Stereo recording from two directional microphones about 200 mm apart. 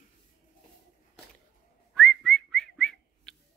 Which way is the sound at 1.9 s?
5° left (ahead or behind).